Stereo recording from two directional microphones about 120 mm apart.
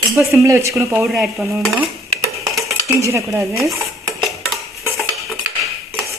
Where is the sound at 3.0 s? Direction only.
25° right (ahead or behind).